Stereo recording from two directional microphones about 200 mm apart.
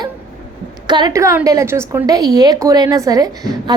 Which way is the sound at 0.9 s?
20° right (ahead or behind).